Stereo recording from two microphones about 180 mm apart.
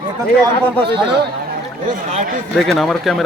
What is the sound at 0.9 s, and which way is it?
Speech, 65° right (ahead or behind).